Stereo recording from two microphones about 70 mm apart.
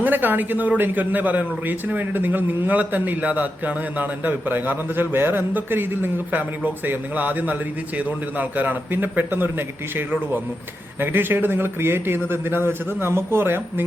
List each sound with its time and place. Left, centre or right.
0.0 s a man's voice: right